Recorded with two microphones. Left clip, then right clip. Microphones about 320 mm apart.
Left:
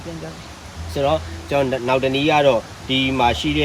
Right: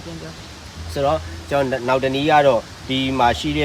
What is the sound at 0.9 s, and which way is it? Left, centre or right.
Speech, centre.